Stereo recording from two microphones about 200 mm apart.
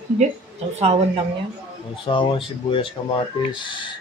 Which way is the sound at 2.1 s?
25° left (ahead or behind).